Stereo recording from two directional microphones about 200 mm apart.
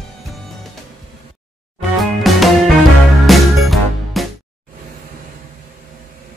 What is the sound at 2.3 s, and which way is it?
Music, centre (ahead or behind).